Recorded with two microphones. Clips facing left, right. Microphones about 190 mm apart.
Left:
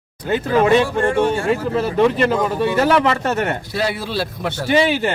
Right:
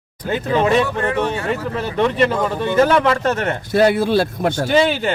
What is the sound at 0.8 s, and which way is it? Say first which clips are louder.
Speech: left 3 dB; 30° left (ahead or behind).